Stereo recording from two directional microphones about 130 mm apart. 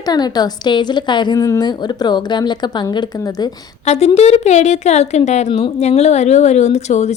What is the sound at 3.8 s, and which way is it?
A woman's voice, 60° left (ahead or behind).